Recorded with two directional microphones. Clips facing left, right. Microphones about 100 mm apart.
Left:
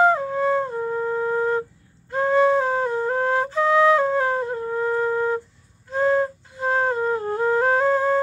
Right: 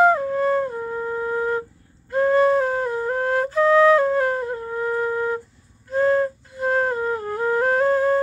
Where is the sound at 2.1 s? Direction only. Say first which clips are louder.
Right 1 dB; 25° left (ahead or behind).